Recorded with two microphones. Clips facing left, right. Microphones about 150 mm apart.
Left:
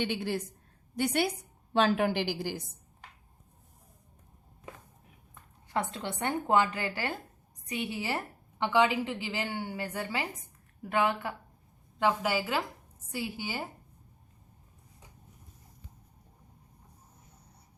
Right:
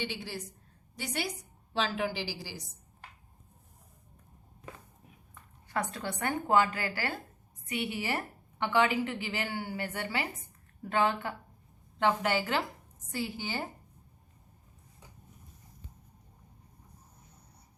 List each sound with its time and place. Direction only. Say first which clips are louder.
0.0 s a woman's voice: left 6 dB; 55° left (ahead or behind)
5.7 s a woman's voice: left 1 dB; 25° left (ahead or behind)